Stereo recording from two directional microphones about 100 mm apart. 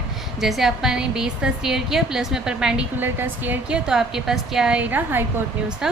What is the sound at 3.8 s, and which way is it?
A woman's voice, 5° right (ahead or behind).